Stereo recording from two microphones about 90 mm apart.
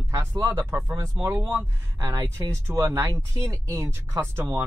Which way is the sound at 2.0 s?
40° right (ahead or behind).